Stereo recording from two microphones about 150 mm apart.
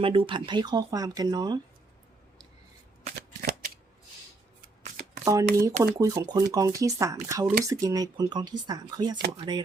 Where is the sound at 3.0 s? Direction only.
65° right (ahead or behind).